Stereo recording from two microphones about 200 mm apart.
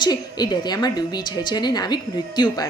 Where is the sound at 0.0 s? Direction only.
20° left (ahead or behind).